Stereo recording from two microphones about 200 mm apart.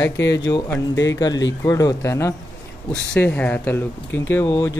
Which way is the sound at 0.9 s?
65° left (ahead or behind).